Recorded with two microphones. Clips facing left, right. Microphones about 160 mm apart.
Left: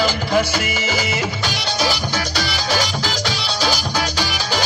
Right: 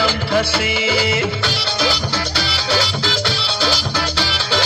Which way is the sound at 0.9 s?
30° right (ahead or behind).